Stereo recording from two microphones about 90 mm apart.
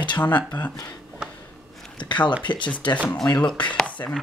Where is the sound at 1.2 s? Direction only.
10° right (ahead or behind).